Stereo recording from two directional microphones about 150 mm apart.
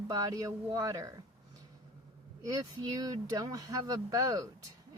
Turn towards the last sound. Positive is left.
turn(degrees=-20)  # may be behind; listen again after turning